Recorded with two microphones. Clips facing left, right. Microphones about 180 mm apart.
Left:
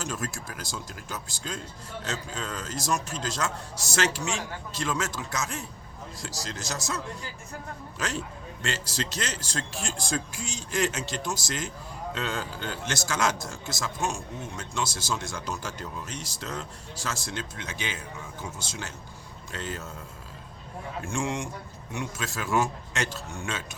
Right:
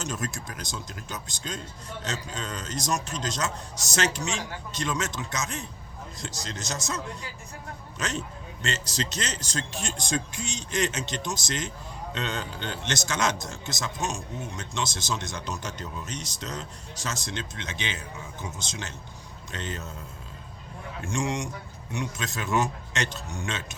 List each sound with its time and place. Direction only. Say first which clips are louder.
0.0 s speech: right 1 dB; 20° right (ahead or behind)
8.6 s speech: right 1 dB; 20° right (ahead or behind)
21.0 s speech: right 2 dB; 20° right (ahead or behind)